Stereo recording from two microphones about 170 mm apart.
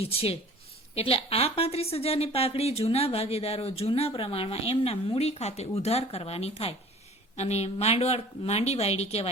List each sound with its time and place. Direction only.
0.0 s a woman's voice: 35° left (ahead or behind)